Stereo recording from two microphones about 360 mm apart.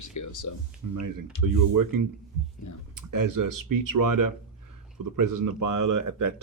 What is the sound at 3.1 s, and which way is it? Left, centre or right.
Speech, right.